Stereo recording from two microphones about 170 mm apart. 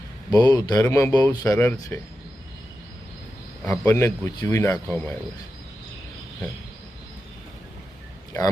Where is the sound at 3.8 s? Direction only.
15° left (ahead or behind).